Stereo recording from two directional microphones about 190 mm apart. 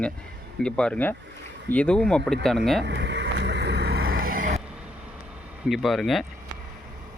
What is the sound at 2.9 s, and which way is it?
Vehicle, 65° right (ahead or behind).